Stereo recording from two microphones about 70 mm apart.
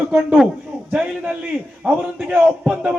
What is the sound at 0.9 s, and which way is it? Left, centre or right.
Speech, centre.